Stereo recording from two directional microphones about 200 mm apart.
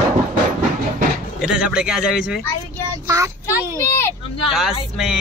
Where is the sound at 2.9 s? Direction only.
15° right (ahead or behind).